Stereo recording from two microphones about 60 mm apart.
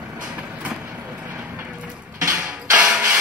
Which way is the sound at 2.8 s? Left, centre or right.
Centre.